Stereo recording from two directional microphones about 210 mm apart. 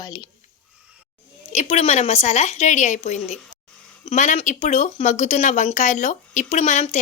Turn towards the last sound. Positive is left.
turn(degrees=35)  # may be behind; listen again after turning